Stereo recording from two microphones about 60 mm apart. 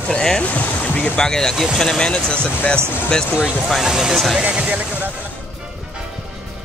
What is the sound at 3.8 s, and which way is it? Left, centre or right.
Speech, centre.